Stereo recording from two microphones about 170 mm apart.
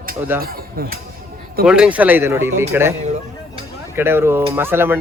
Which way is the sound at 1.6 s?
5° right (ahead or behind).